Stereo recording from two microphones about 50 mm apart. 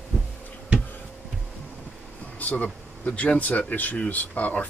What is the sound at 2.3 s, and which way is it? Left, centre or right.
Speech, left.